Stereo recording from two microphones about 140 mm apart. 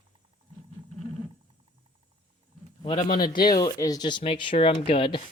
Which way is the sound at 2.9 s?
85° left.